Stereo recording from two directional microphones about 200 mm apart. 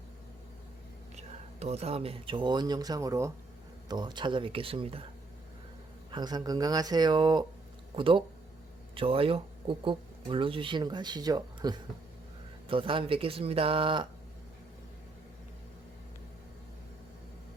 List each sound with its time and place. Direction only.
1.1 s speech: 35° right (ahead or behind)
6.1 s speech: 20° right (ahead or behind)